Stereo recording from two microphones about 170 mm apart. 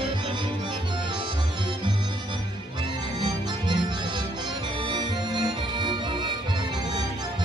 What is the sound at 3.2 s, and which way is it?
Music, 25° right (ahead or behind).